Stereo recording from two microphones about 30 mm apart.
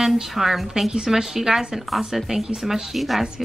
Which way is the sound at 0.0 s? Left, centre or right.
Centre.